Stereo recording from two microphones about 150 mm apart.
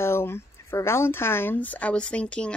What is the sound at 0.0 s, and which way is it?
Speech, 15° left (ahead or behind).